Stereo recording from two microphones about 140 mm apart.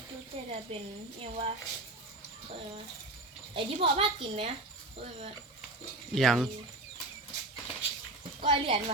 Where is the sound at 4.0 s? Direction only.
40° right (ahead or behind).